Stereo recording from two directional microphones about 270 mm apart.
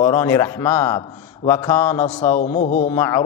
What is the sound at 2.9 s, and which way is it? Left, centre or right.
Speech, centre.